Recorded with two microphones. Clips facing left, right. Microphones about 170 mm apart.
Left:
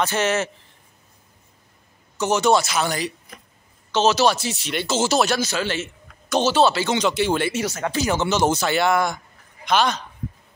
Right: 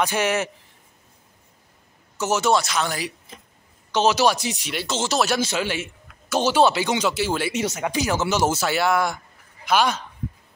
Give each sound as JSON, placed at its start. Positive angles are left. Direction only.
{"t": 0.0, "sound": "speech", "side_deg": -10}
{"t": 2.1, "sound": "speech", "side_deg": -5}
{"t": 3.3, "sound": "speech", "side_deg": -25}
{"t": 3.9, "sound": "speech", "side_deg": -15}
{"t": 4.7, "sound": "speech", "side_deg": 5}
{"t": 5.4, "sound": "a man's voice", "side_deg": -20}
{"t": 5.7, "sound": "speech", "side_deg": -10}
{"t": 7.5, "sound": "speech", "side_deg": -20}